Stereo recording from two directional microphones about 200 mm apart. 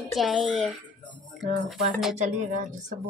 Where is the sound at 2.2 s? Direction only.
40° right (ahead or behind).